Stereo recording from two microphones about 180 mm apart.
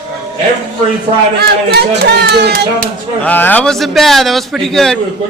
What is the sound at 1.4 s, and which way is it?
Speech, 65° right (ahead or behind).